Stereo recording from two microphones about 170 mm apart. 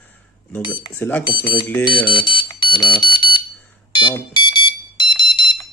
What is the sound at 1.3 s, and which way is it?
Speech, 25° left (ahead or behind).